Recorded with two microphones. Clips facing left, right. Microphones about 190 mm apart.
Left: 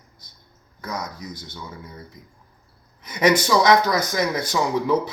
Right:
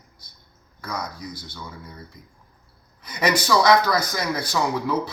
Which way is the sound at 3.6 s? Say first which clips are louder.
Left 1 dB; 20° left (ahead or behind).